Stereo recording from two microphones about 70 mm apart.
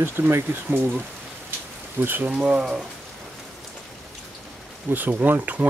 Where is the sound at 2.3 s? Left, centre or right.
Centre.